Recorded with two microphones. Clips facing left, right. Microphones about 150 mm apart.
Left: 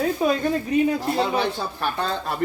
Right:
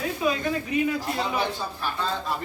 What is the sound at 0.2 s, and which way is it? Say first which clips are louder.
Speech: left 3 dB; 45° left (ahead or behind).